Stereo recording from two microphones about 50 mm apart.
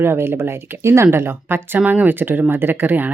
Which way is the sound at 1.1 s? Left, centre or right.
Right.